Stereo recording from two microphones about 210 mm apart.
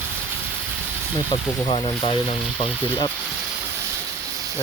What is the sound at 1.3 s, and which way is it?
Speech, 20° left (ahead or behind).